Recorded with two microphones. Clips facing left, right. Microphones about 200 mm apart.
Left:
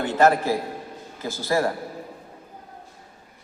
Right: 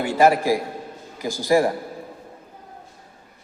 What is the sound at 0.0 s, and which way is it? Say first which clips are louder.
A man's voice: right 2 dB; 10° right (ahead or behind).